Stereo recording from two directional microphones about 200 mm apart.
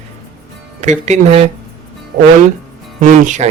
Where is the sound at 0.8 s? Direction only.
35° right (ahead or behind).